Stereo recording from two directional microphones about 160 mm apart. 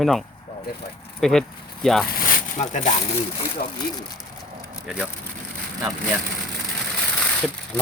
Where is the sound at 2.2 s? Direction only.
50° left (ahead or behind).